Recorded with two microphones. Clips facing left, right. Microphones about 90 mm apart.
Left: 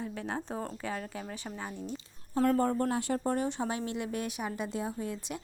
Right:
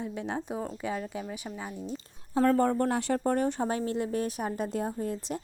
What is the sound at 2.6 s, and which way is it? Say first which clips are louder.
Speech: right 3 dB; 65° right (ahead or behind).